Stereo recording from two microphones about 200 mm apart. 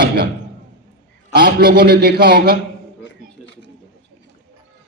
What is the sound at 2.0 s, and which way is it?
Speech, 50° right (ahead or behind).